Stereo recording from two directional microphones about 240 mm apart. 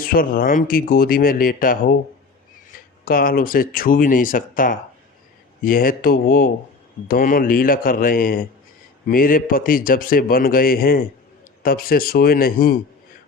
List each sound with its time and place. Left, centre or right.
0.0 s speech: left